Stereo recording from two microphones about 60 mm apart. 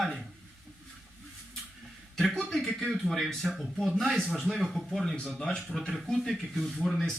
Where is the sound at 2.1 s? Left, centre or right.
Centre.